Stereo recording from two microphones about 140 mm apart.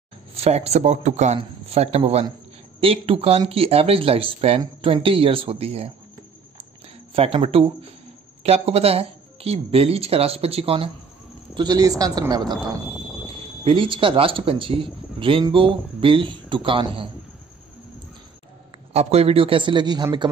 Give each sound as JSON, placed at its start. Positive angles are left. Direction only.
{"t": 0.3, "sound": "a man's voice", "side_deg": -45}
{"t": 7.2, "sound": "speech", "side_deg": -45}
{"t": 11.5, "sound": "speech", "side_deg": -30}
{"t": 13.7, "sound": "a man's voice", "side_deg": -40}
{"t": 18.9, "sound": "a man's voice", "side_deg": -45}